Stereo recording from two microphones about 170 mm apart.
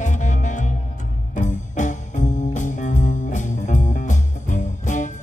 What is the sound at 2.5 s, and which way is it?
Music, 45° left (ahead or behind).